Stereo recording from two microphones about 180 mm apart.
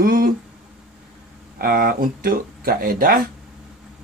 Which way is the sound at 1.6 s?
55° right (ahead or behind).